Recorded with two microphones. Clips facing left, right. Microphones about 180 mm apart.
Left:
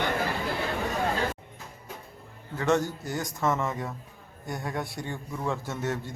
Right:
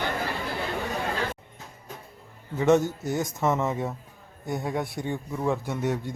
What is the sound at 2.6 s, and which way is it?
A man's voice, 20° right (ahead or behind).